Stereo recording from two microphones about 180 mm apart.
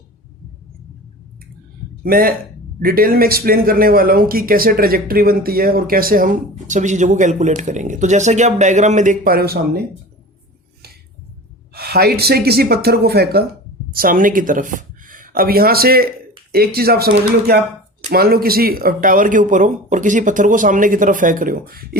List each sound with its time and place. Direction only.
2.0 s speech: 55° right (ahead or behind)
11.7 s speech: 60° right (ahead or behind)